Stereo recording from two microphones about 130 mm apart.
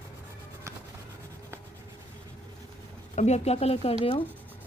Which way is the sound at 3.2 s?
55° left (ahead or behind).